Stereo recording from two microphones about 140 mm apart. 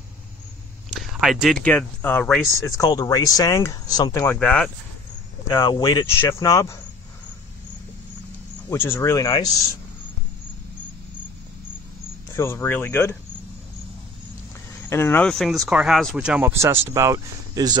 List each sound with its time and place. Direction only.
0.8 s speech: centre (ahead or behind)
2.6 s speech: 25° left (ahead or behind)
4.4 s speech: 5° left (ahead or behind)
5.5 s speech: 30° left (ahead or behind)
8.6 s speech: 20° left (ahead or behind)
12.4 s speech: 20° left (ahead or behind)
14.9 s speech: 15° left (ahead or behind)
15.2 s speech: centre (ahead or behind); by 17.7 s 25° right (ahead or behind)